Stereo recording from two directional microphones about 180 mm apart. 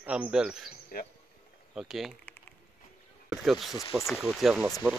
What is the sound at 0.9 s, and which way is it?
Speech, 50° left (ahead or behind).